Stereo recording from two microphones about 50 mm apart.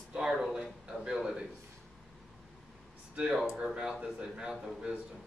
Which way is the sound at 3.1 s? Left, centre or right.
Centre.